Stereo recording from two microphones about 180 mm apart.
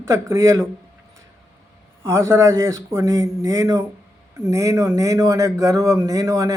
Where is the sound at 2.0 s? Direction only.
15° right (ahead or behind).